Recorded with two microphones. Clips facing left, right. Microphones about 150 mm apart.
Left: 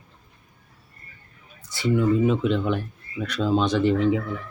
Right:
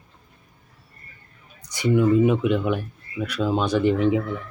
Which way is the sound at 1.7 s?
15° right (ahead or behind).